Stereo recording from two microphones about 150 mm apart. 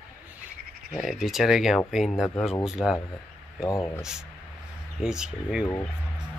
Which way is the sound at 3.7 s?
20° left (ahead or behind).